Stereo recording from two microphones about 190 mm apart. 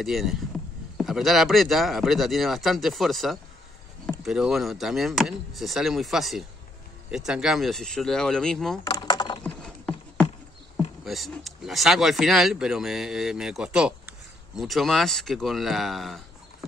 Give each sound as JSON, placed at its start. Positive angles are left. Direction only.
{"t": 0.0, "sound": "speech", "side_deg": 0}
{"t": 8.8, "sound": "a sound", "side_deg": 20}
{"t": 9.4, "sound": "clip-clop", "side_deg": 5}
{"t": 11.1, "sound": "speech", "side_deg": 0}